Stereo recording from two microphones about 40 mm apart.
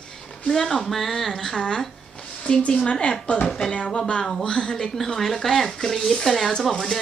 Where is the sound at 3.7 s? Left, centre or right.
Left; by 6.9 s centre.